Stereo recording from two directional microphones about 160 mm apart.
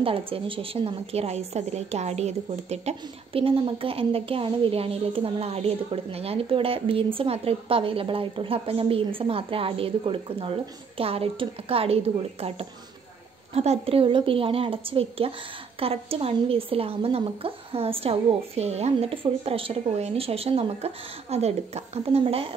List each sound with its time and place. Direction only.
0.0 s a woman's voice: 35° right (ahead or behind)